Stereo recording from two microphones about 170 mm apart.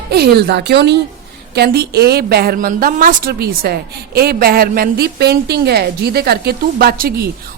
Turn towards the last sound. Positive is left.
turn(degrees=-60)  # may be behind; listen again after turning